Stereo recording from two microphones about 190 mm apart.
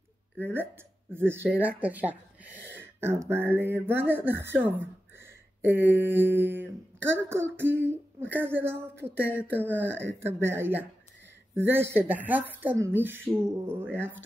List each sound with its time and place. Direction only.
0.4 s speech: 10° right (ahead or behind)
9.8 s speech: 70° right (ahead or behind)
10.2 s speech: 10° right (ahead or behind)